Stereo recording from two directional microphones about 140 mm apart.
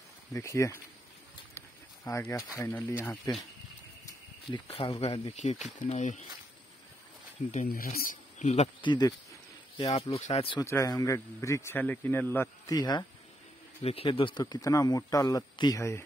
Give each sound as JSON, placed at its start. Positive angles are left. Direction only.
{"t": 0.3, "sound": "speech", "side_deg": 20}
{"t": 2.0, "sound": "speech", "side_deg": 20}
{"t": 4.5, "sound": "speech", "side_deg": 40}
{"t": 5.4, "sound": "speech", "side_deg": 55}
{"t": 7.6, "sound": "speech", "side_deg": 90}
{"t": 8.8, "sound": "speech", "side_deg": 30}
{"t": 9.8, "sound": "speech", "side_deg": 45}
{"t": 10.6, "sound": "speech", "side_deg": 20}
{"t": 12.7, "sound": "speech", "side_deg": 30}
{"t": 13.8, "sound": "speech", "side_deg": 40}